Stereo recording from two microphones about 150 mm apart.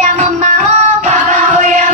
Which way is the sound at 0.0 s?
50° right (ahead or behind).